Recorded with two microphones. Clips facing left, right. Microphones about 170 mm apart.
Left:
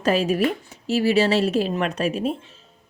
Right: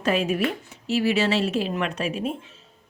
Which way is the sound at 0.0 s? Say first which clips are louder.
Left 3 dB; 35° left (ahead or behind).